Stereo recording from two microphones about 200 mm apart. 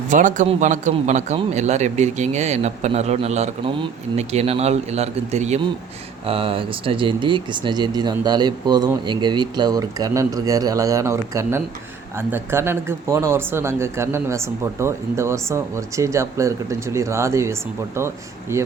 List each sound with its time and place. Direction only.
0.1 s a man's voice: 40° right (ahead or behind); by 18.6 s 15° right (ahead or behind)